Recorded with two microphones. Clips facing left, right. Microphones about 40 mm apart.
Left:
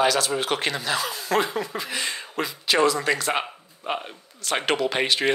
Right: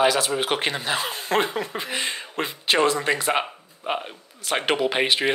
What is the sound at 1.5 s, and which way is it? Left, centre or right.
Speech, right.